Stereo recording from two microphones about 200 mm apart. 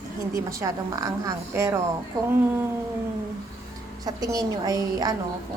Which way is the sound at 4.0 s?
20° right (ahead or behind).